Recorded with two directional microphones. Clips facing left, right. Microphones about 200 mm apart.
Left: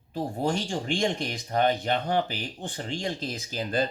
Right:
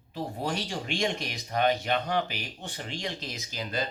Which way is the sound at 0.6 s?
30° left (ahead or behind).